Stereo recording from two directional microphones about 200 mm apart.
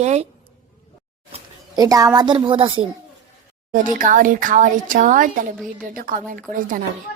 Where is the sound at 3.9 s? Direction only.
40° right (ahead or behind).